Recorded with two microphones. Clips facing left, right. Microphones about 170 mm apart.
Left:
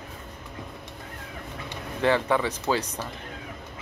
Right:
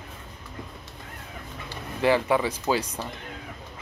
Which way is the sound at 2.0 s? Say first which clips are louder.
Right 1 dB; 10° right (ahead or behind).